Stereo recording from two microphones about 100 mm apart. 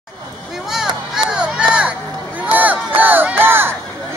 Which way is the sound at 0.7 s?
5° right (ahead or behind).